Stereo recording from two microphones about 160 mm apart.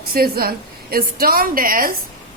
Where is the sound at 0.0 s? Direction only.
70° right (ahead or behind).